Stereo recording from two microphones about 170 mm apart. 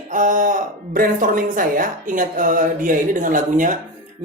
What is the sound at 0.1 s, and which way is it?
Speech, 50° right (ahead or behind).